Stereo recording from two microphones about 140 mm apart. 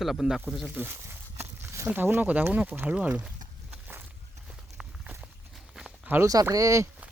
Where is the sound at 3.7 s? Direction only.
15° right (ahead or behind).